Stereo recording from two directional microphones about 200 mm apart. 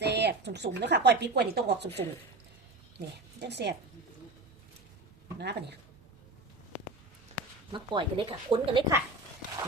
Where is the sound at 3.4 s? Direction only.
60° right (ahead or behind).